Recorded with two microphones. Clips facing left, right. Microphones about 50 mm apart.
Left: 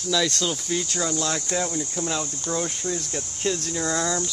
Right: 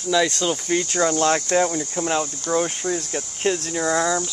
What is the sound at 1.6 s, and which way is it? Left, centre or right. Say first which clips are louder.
Speech: right 5 dB; right.